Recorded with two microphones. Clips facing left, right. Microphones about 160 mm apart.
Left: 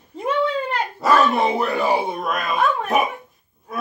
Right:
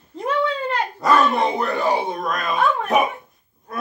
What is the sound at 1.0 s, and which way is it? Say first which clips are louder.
Speech: left 1 dB; centre (ahead or behind).